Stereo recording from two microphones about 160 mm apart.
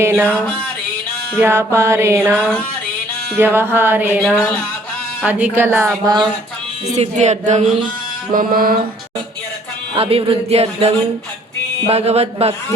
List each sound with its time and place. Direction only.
0.0 s mantra: 15° right (ahead or behind)
1.4 s mantra: 15° right (ahead or behind)
5.2 s mantra: 10° right (ahead or behind)
6.9 s speech: 45° right (ahead or behind)
8.3 s mantra: 60° right (ahead or behind)
9.9 s speech: 35° right (ahead or behind)